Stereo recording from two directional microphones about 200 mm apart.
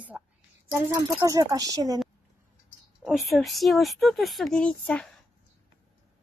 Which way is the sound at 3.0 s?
Centre (ahead or behind).